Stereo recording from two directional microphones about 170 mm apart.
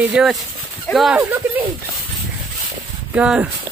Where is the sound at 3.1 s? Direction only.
5° right (ahead or behind).